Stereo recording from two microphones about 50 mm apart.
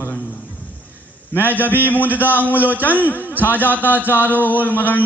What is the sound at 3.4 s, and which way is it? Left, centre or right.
A man's voice, left.